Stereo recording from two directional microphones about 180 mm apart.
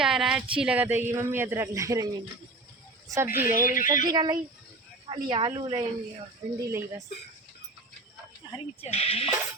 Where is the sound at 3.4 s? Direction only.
10° right (ahead or behind).